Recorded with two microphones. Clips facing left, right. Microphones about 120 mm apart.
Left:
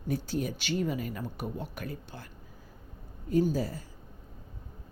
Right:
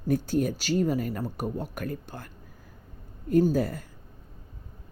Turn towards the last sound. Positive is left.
turn(degrees=-60)  # may be behind; listen again after turning